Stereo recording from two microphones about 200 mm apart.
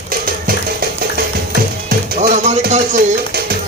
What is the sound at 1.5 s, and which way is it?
Music, 50° right (ahead or behind).